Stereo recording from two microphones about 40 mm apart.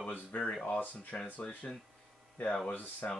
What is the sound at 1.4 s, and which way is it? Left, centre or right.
Speech, left.